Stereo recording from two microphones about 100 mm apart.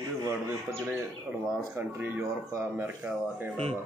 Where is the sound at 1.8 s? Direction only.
20° right (ahead or behind).